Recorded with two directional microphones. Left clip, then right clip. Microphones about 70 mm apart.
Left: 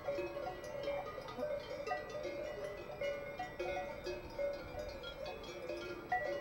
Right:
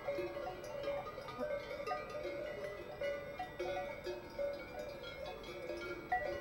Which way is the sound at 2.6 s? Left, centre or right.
Centre.